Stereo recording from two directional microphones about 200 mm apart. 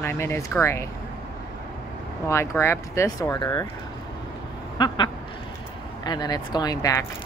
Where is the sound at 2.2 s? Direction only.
15° left (ahead or behind).